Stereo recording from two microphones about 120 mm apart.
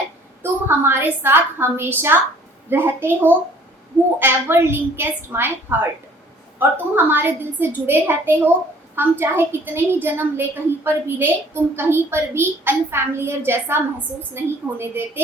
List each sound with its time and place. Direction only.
0.4 s a woman's voice: 20° right (ahead or behind)